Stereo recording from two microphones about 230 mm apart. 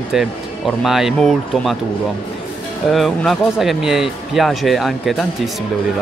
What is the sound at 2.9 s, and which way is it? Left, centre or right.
A man's voice, centre.